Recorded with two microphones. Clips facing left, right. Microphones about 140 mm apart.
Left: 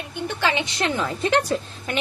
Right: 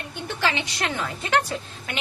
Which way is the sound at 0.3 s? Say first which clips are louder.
Left 2 dB; 20° left (ahead or behind).